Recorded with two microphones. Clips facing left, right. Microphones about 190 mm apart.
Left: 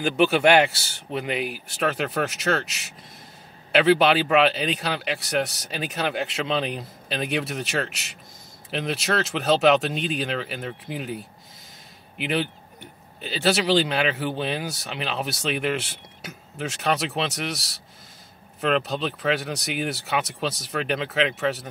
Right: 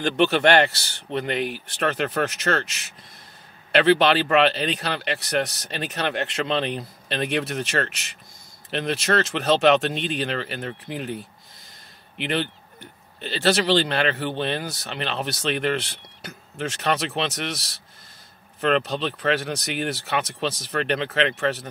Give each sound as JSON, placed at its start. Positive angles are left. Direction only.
{"t": 0.0, "sound": "speech", "side_deg": 5}
{"t": 12.2, "sound": "speech", "side_deg": 5}